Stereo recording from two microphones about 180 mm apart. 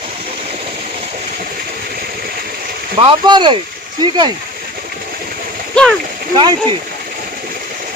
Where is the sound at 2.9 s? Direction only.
30° right (ahead or behind).